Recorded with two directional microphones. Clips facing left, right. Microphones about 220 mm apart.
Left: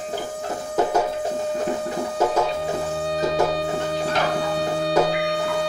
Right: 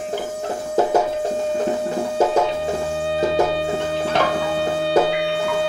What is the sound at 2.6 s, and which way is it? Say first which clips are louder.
Music: right 2 dB; 25° right (ahead or behind).